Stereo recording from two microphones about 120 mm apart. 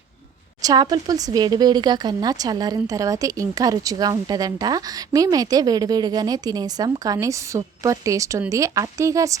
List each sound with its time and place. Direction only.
0.6 s speech: 35° right (ahead or behind)